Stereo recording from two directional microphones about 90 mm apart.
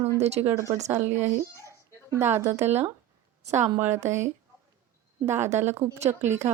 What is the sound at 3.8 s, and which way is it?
Speech, 30° right (ahead or behind).